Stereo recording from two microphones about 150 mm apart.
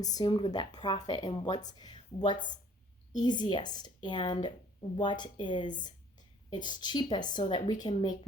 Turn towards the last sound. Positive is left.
turn(degrees=30)  # may be behind; listen again after turning